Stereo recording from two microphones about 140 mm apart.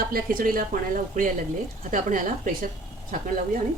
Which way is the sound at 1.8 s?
65° right (ahead or behind).